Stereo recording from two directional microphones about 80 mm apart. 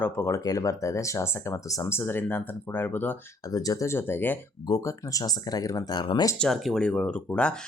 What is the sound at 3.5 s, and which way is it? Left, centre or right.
Speech, left.